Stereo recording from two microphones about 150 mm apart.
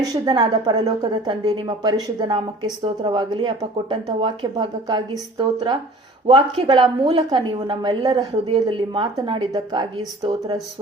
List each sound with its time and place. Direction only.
0.1 s a woman's voice: 25° right (ahead or behind)